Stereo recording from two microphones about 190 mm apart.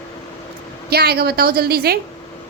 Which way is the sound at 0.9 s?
55° right (ahead or behind).